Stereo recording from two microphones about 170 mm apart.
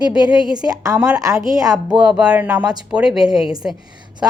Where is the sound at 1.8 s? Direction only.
5° right (ahead or behind).